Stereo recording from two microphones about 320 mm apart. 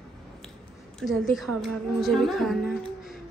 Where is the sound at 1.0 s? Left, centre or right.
Centre.